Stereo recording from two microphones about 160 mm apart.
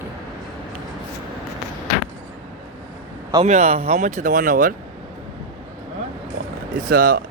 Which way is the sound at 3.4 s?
45° right (ahead or behind).